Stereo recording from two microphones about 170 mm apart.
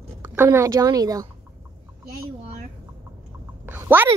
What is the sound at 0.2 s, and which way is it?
A woman's voice, 15° right (ahead or behind).